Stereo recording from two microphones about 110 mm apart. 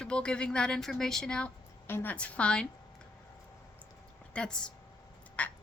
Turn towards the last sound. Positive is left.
turn(degrees=15)  # may be behind; listen again after turning